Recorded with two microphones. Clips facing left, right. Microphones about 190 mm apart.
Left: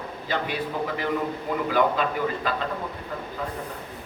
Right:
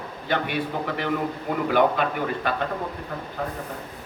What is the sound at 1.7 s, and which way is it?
Speech, 60° right (ahead or behind).